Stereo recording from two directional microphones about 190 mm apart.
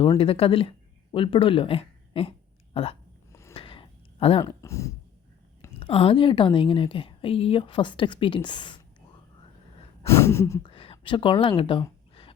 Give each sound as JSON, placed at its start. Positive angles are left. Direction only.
{"t": 0.2, "sound": "speech", "side_deg": 30}
{"t": 3.5, "sound": "a sound", "side_deg": 30}
{"t": 4.4, "sound": "speech", "side_deg": 15}
{"t": 5.8, "sound": "a woman's voice", "side_deg": 30}
{"t": 10.1, "sound": "gasp", "side_deg": 15}
{"t": 10.7, "sound": "a sound", "side_deg": 30}